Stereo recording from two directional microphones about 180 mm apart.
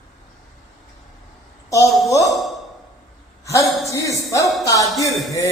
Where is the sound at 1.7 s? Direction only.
15° left (ahead or behind).